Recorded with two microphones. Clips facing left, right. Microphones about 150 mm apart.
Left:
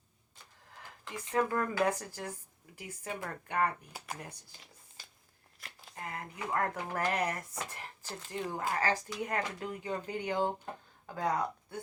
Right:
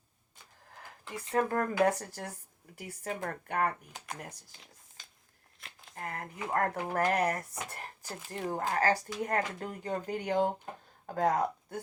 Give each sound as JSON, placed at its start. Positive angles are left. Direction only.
{"t": 1.3, "sound": "speech", "side_deg": -50}
{"t": 3.9, "sound": "speech", "side_deg": 5}
{"t": 4.5, "sound": "a sound", "side_deg": 0}
{"t": 5.9, "sound": "speech", "side_deg": -50}